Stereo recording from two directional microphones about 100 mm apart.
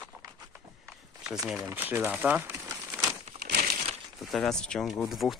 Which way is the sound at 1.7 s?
25° right (ahead or behind).